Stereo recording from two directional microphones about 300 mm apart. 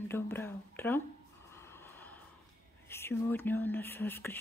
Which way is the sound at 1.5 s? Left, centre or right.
Centre.